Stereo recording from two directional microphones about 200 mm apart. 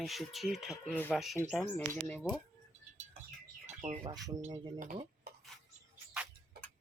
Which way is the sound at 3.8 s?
35° right (ahead or behind).